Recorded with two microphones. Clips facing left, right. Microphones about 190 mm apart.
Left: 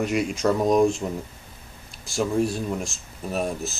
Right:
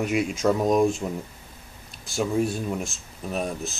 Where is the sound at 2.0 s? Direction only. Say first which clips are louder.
Left 1 dB; centre (ahead or behind).